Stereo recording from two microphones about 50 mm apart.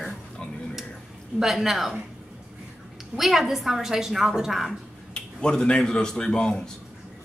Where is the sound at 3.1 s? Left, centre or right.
Centre.